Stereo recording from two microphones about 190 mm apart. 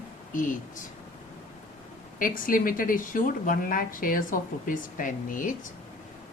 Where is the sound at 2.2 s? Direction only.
45° left (ahead or behind).